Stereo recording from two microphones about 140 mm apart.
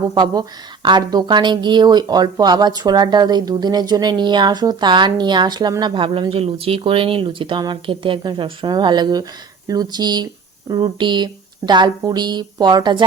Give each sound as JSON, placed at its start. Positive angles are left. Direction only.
{"t": 0.1, "sound": "speech", "side_deg": -30}